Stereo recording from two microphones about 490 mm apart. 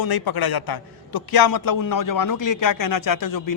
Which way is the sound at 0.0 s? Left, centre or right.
Left.